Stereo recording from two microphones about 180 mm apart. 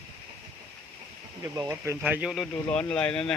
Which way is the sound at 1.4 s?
20° right (ahead or behind).